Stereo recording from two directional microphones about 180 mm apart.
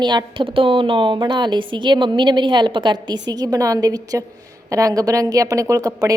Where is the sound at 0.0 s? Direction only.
25° right (ahead or behind).